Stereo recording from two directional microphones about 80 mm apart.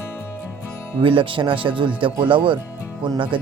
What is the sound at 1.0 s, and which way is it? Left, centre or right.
Speech, right.